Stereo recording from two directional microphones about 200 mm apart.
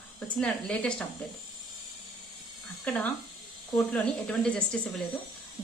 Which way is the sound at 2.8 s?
5° left (ahead or behind).